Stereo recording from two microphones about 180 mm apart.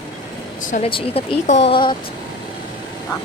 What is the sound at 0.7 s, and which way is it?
Speech, 40° left (ahead or behind).